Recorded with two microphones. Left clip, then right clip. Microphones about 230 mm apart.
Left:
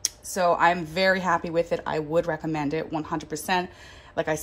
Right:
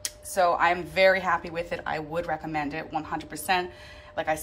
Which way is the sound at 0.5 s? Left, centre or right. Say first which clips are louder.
Left 1 dB; left.